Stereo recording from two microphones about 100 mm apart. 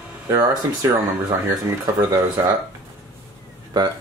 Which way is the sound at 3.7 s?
45° right (ahead or behind).